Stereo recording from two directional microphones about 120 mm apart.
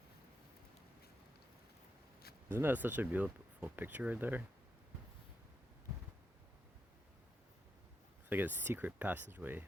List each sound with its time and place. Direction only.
2.5 s speech: 20° right (ahead or behind)
8.3 s speech: 15° right (ahead or behind)